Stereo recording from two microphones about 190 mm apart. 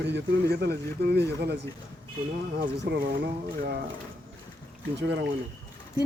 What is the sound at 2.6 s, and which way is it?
Speech, 60° right (ahead or behind).